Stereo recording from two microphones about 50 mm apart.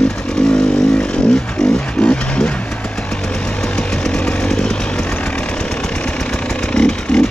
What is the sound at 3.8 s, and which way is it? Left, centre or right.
Chainsaw, centre.